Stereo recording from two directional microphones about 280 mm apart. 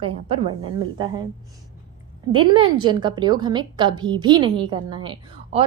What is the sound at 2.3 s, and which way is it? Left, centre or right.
A woman's voice, centre.